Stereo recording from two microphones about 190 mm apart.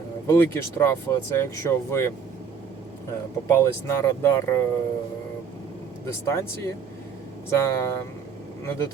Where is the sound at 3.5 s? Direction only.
15° left (ahead or behind).